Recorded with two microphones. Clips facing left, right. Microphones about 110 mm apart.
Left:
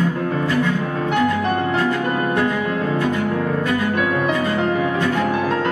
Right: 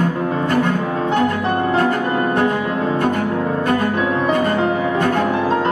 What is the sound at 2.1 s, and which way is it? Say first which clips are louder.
Music: right 2 dB; 30° right (ahead or behind).